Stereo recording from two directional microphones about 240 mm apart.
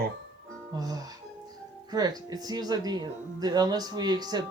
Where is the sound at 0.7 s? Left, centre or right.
Centre.